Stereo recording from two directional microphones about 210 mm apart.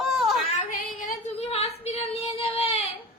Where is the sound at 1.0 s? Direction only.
35° left (ahead or behind).